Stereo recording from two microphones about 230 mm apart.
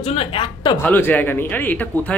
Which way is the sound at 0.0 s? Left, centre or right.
Left.